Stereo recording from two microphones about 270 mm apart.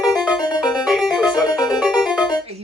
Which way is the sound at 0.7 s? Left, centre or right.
Centre.